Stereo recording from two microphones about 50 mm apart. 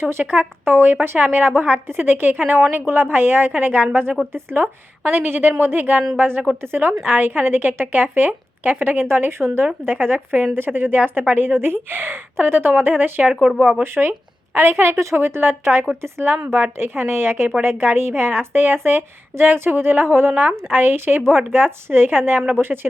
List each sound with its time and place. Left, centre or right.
0.0 s speech: right
13.5 s speech: centre
13.8 s speech: right